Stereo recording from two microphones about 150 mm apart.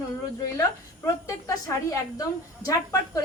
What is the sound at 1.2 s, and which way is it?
A woman's voice, 20° left (ahead or behind).